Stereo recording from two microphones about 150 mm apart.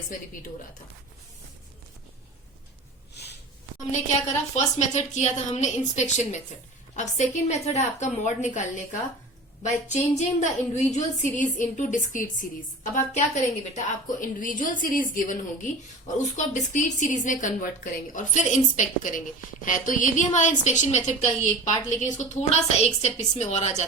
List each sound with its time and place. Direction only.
3.2 s sniff: 90° left
4.5 s a woman's voice: 50° left (ahead or behind)
16.1 s a woman's voice: 50° left (ahead or behind)